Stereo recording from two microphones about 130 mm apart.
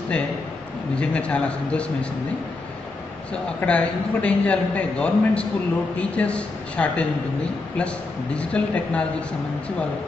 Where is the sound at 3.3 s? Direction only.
10° left (ahead or behind).